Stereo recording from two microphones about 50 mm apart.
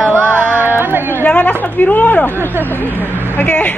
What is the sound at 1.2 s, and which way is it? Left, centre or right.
A woman's voice, left.